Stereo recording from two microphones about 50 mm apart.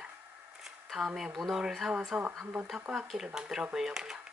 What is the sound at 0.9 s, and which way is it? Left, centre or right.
Speech, centre.